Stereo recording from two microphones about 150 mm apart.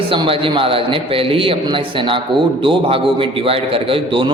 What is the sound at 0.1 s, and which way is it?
A man's voice, 35° right (ahead or behind).